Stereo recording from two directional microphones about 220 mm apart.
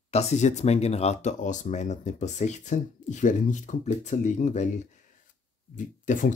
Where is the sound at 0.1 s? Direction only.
30° left (ahead or behind).